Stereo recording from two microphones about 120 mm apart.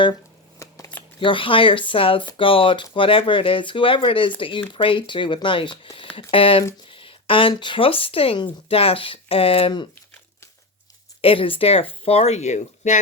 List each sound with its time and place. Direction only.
0.6 s shuffling cards: 25° left (ahead or behind)
1.2 s speech: 45° left (ahead or behind)
6.9 s a sound: 45° left (ahead or behind)
7.5 s speech: 40° left (ahead or behind)
11.2 s speech: 50° left (ahead or behind); by 13.0 s 80° left